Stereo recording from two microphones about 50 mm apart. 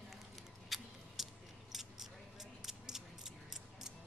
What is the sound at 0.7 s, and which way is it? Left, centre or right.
Scissors, centre.